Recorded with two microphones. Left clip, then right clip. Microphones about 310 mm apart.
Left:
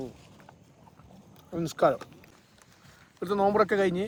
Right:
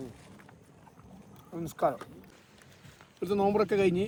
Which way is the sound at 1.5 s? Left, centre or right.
Left.